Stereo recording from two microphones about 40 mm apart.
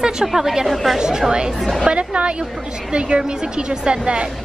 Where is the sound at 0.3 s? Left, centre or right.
Centre.